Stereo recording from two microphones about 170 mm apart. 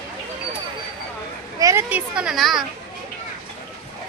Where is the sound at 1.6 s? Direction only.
20° right (ahead or behind).